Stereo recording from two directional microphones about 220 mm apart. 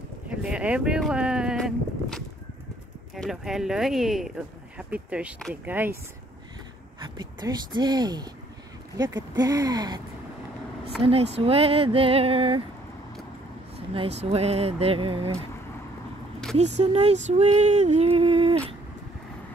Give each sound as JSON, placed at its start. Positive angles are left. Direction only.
{"t": 0.3, "sound": "speech", "side_deg": -5}
{"t": 7.0, "sound": "speech", "side_deg": -20}
{"t": 9.4, "sound": "speech", "side_deg": -15}
{"t": 11.0, "sound": "speech", "side_deg": -25}
{"t": 13.9, "sound": "speech", "side_deg": -25}
{"t": 16.5, "sound": "speech", "side_deg": -30}